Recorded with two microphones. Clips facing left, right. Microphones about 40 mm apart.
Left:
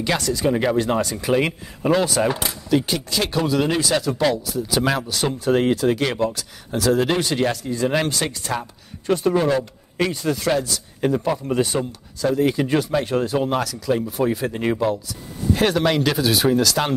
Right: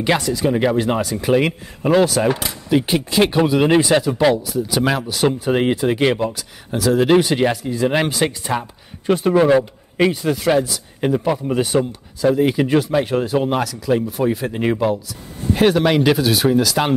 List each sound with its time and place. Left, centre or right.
0.2 s speech: centre
2.7 s speech: right
4.0 s speech: centre
5.5 s speech: right
6.1 s speech: centre
14.5 s speech: centre
16.3 s speech: centre